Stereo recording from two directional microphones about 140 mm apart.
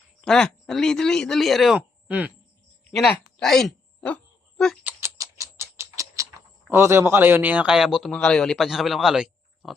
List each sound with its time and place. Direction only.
0.2 s a man's voice: 5° left (ahead or behind)
2.0 s speech: 10° right (ahead or behind)
2.9 s a sound: centre (ahead or behind)
4.8 s rodents: 15° right (ahead or behind)
6.7 s a man's voice: 15° right (ahead or behind)